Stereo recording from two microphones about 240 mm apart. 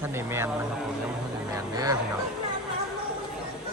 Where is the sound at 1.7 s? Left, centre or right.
Centre.